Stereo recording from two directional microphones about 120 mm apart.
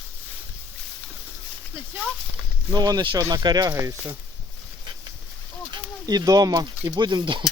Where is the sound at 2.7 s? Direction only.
35° right (ahead or behind).